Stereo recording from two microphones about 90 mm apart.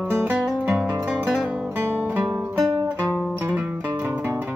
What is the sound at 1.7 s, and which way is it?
Music, 20° right (ahead or behind).